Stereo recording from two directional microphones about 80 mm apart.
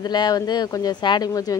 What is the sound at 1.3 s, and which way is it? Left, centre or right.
Speech, left.